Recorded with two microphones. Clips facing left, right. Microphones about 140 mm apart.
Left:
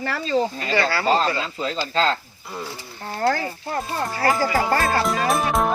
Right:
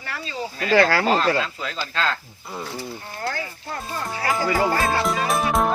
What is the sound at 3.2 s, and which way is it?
Speech, 45° left (ahead or behind).